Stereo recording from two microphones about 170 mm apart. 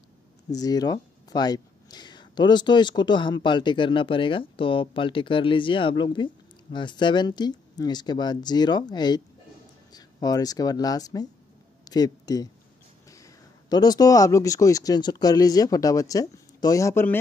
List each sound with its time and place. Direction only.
0.5 s speech: 20° left (ahead or behind)